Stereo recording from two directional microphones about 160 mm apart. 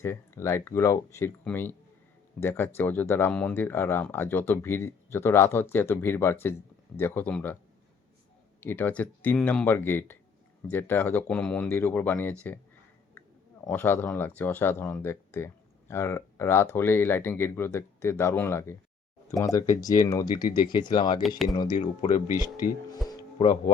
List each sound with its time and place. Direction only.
0.0 s speech: 15° left (ahead or behind)
8.6 s speech: 10° left (ahead or behind)
13.7 s speech: 10° left (ahead or behind); by 21.2 s 30° left (ahead or behind)
21.2 s speech: centre (ahead or behind)
21.5 s speech: 25° left (ahead or behind)
21.8 s speech: 45° left (ahead or behind)